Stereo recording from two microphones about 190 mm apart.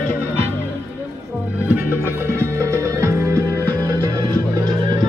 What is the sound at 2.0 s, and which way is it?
Music, 15° right (ahead or behind).